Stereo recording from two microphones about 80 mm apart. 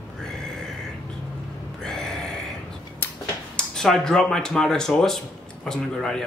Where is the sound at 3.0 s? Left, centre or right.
Left.